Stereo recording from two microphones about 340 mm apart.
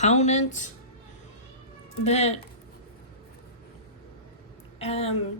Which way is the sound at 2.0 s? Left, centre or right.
Centre.